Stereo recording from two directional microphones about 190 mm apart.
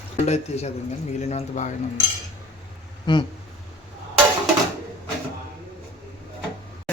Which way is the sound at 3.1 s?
25° left (ahead or behind).